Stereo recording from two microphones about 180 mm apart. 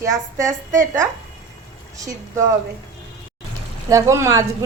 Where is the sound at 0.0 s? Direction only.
15° right (ahead or behind).